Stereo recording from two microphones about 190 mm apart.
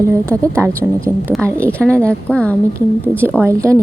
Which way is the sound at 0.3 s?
15° right (ahead or behind).